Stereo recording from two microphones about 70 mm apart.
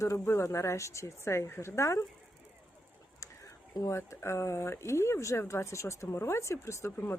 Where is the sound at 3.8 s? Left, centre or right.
Left.